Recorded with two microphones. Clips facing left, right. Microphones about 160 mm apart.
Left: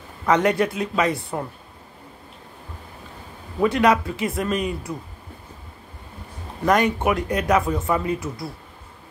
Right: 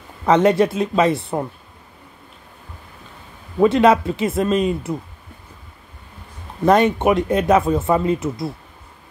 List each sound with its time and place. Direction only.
0.3 s speech: 25° right (ahead or behind)
3.5 s speech: 25° right (ahead or behind)
6.6 s speech: 25° right (ahead or behind)